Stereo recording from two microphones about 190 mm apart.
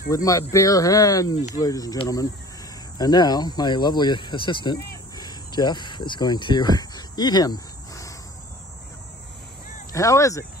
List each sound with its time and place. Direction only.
0.1 s speech: 20° left (ahead or behind)
4.7 s cricket: 15° left (ahead or behind)
9.9 s speech: 15° left (ahead or behind)